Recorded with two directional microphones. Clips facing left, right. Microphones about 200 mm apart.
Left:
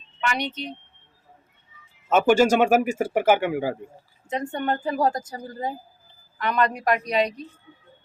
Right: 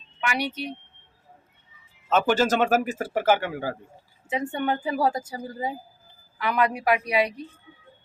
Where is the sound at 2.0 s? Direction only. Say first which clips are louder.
Left 4 dB; 10° left (ahead or behind).